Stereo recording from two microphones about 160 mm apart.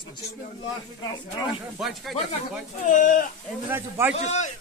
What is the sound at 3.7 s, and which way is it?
Speech, 15° right (ahead or behind).